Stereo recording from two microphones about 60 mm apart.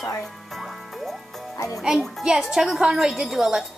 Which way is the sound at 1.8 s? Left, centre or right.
Centre.